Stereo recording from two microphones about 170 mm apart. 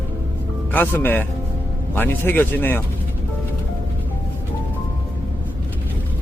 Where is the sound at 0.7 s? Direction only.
10° left (ahead or behind).